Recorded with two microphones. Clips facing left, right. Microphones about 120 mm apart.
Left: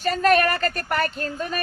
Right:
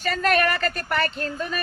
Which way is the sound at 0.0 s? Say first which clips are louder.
Left 3 dB; 40° left (ahead or behind).